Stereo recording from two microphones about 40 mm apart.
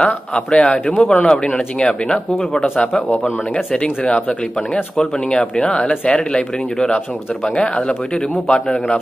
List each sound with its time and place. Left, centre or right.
0.0 s speech: left
4.9 s speech: left
6.1 s a man's voice: centre